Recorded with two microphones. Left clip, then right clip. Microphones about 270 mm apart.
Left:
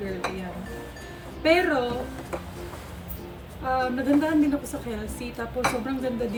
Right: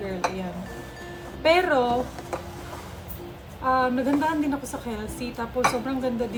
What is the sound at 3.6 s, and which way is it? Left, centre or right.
A woman's voice, centre.